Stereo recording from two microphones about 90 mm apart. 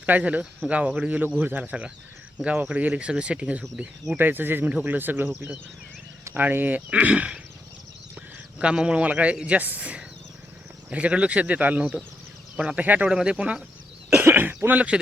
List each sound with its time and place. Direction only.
0.0 s speech: 15° right (ahead or behind)
4.2 s speech: 20° right (ahead or behind)
8.5 s speech: 10° right (ahead or behind)
14.2 s throat clearing: 25° right (ahead or behind)